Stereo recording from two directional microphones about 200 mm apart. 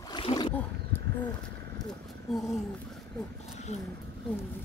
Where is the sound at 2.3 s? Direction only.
Centre (ahead or behind).